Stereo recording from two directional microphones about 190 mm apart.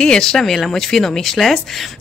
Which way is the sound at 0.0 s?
5° left (ahead or behind).